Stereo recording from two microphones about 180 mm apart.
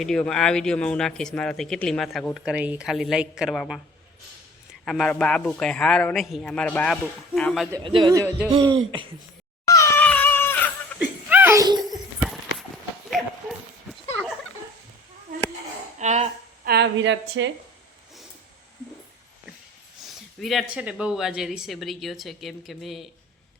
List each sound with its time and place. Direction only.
0.0 s speech: 5° left (ahead or behind)
4.9 s speech: 5° left (ahead or behind)
7.9 s a man's voice: 25° right (ahead or behind)
9.6 s cat: 15° left (ahead or behind)
11.3 s giggle: 10° right (ahead or behind)
11.9 s a sound: centre (ahead or behind)
16.0 s a sound: 40° right (ahead or behind)
16.6 s a woman's voice: 70° right (ahead or behind); by 17.5 s 90° right
20.4 s speech: centre (ahead or behind)